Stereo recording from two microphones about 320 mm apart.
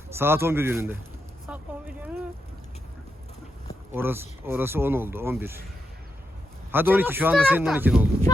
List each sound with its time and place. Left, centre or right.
0.2 s speech: centre
3.9 s speech: centre
6.7 s speech: centre